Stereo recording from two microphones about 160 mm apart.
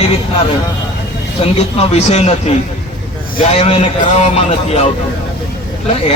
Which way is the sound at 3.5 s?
40° left (ahead or behind).